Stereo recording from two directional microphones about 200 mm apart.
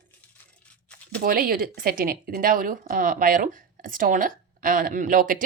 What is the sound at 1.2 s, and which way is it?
A woman's voice, 45° right (ahead or behind).